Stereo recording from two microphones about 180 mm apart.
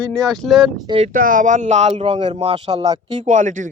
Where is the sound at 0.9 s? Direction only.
35° right (ahead or behind).